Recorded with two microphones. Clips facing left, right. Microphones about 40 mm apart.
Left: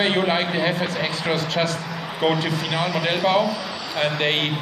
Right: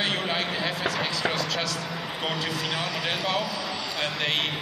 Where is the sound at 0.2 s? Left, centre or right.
Left.